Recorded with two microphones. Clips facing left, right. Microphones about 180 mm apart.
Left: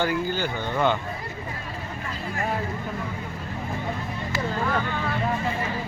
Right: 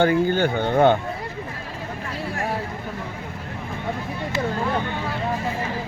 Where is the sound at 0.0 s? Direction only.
55° right (ahead or behind).